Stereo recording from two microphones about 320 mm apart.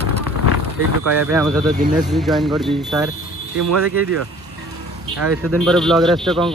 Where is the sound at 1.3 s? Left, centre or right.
Centre.